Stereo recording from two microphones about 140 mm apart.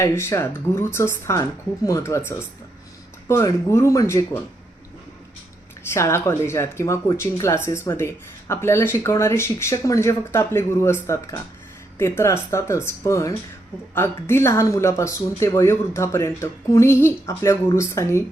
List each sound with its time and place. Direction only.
0.0 s speech: 20° left (ahead or behind)
5.9 s speech: 20° left (ahead or behind)